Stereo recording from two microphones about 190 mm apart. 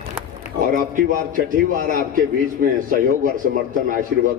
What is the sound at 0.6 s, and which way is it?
A man's voice, 45° right (ahead or behind).